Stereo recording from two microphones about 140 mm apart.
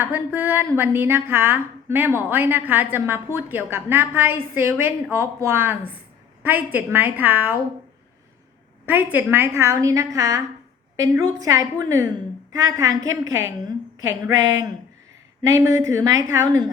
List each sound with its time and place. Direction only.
0.0 s speech: 15° right (ahead or behind)
8.9 s a woman's voice: 15° right (ahead or behind)